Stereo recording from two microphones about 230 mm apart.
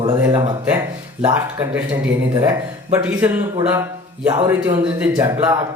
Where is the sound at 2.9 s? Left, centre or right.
Centre.